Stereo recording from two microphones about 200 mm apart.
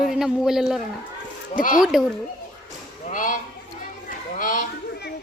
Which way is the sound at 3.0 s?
40° left (ahead or behind).